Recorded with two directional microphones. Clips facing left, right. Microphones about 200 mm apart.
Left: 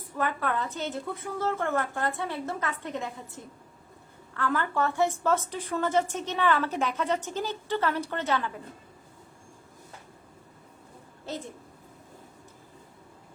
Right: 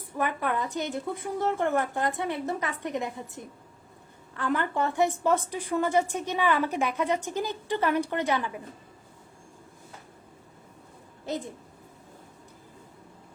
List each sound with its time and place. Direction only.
0.2 s a woman's voice: 15° right (ahead or behind)